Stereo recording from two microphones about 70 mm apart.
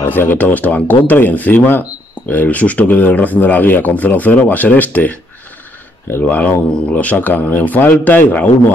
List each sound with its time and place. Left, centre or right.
0.0 s speech: left
6.2 s speech: centre